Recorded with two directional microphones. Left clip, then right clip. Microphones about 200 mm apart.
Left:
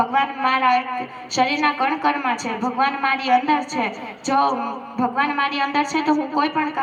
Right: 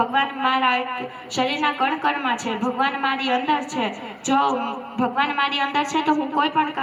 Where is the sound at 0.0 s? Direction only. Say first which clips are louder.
Left 1 dB; 45° left (ahead or behind).